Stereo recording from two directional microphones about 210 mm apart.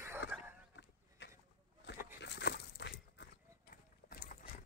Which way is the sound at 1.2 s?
55° left (ahead or behind).